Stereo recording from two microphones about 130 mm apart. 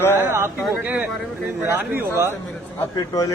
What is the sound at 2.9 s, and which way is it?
Speech, 25° left (ahead or behind).